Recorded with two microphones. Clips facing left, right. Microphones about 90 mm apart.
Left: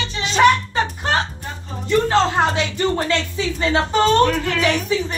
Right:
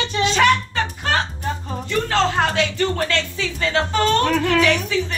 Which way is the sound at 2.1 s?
20° left (ahead or behind).